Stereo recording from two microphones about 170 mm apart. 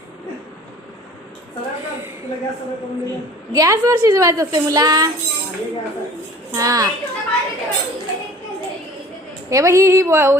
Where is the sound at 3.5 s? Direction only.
20° right (ahead or behind).